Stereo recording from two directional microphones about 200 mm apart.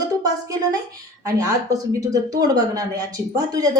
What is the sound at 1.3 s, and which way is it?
Speech, 15° right (ahead or behind).